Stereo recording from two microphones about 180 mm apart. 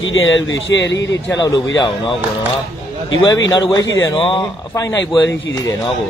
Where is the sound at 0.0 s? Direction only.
90° left.